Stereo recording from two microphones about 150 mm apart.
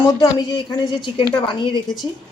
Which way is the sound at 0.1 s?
25° left (ahead or behind).